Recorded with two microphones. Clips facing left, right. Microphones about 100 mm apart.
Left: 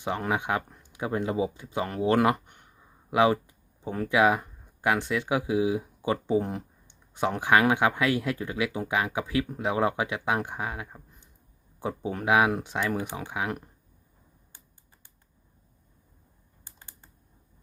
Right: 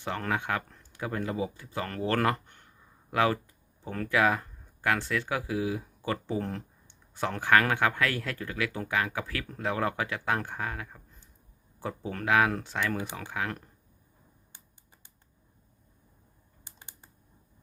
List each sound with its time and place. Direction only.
0.0 s speech: 15° left (ahead or behind)
16.6 s typing: 20° right (ahead or behind)